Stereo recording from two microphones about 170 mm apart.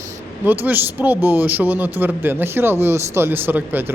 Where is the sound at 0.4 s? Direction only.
10° right (ahead or behind).